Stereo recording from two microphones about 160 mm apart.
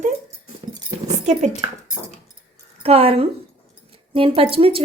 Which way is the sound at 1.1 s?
45° right (ahead or behind).